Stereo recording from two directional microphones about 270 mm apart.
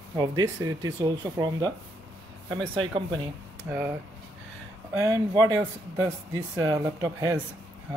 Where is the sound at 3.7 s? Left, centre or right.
Centre.